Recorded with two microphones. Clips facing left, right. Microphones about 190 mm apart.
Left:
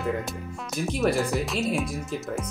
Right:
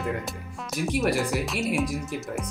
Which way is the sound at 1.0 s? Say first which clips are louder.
Left 2 dB; centre (ahead or behind).